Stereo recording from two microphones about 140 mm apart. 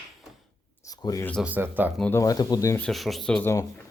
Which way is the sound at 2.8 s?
Centre (ahead or behind).